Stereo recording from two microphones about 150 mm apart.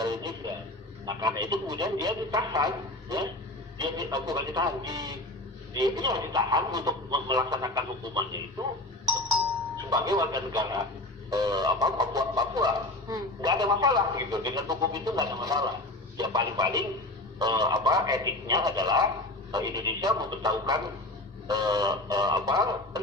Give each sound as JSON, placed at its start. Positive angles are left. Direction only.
{"t": 0.0, "sound": "a sound", "side_deg": -25}
{"t": 1.0, "sound": "speech", "side_deg": -25}
{"t": 9.8, "sound": "speech", "side_deg": -25}